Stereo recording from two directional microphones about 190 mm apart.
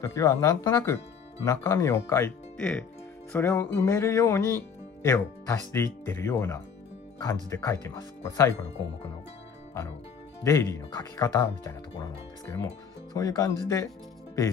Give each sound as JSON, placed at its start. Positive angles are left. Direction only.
{"t": 0.0, "sound": "speech", "side_deg": 15}
{"t": 10.4, "sound": "speech", "side_deg": 15}